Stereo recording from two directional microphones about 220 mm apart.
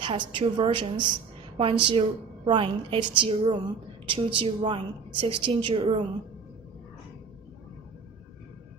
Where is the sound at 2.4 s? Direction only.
25° right (ahead or behind).